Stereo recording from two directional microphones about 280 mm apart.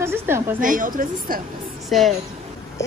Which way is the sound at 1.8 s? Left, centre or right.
Centre.